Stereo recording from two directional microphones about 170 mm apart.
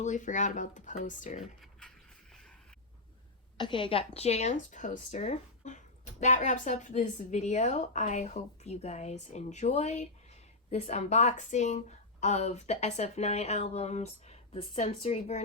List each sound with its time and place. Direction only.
0.0 s speech: 45° left (ahead or behind)
1.4 s speech: centre (ahead or behind)
2.3 s a sound: centre (ahead or behind)
3.6 s speech: 30° left (ahead or behind)